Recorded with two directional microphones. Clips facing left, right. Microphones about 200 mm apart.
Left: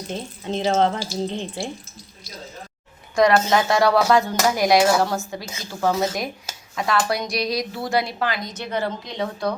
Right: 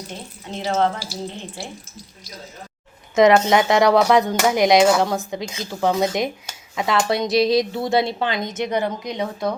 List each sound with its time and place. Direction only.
0.5 s speech: 20° left (ahead or behind)
3.2 s speech: 20° right (ahead or behind)